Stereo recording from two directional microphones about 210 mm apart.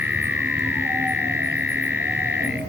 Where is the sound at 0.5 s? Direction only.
10° right (ahead or behind).